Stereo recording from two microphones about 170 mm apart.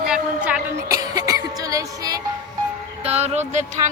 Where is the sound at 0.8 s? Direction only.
20° right (ahead or behind).